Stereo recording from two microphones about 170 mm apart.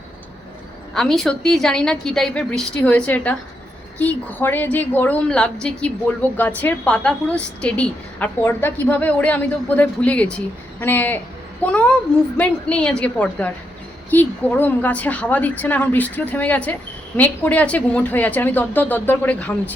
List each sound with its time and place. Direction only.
0.9 s a woman's voice: centre (ahead or behind)